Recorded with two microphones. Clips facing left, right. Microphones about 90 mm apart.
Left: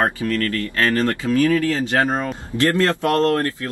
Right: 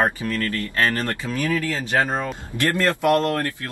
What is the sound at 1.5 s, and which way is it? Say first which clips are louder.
Speech: left 3 dB; 20° left (ahead or behind).